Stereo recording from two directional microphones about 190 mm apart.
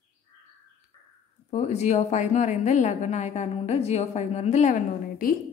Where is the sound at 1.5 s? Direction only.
35° left (ahead or behind).